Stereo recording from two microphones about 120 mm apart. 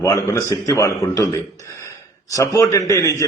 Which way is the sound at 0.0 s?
25° left (ahead or behind).